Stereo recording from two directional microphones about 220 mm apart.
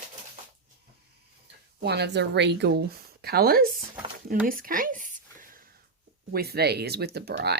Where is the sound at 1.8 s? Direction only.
50° right (ahead or behind).